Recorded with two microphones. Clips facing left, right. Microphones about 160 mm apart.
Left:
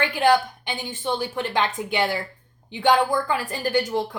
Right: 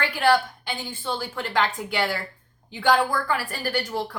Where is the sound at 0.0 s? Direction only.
20° left (ahead or behind).